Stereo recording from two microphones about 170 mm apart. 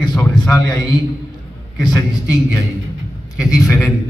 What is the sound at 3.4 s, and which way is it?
Speech, 5° right (ahead or behind).